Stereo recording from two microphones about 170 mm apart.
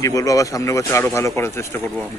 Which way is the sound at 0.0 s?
20° left (ahead or behind).